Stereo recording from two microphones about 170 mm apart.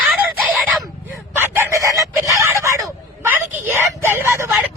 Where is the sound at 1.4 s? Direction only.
15° right (ahead or behind).